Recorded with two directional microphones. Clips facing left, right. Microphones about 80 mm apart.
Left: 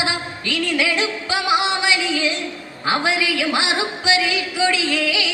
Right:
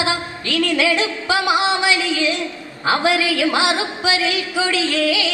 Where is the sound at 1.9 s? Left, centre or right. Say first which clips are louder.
Right 2 dB; left.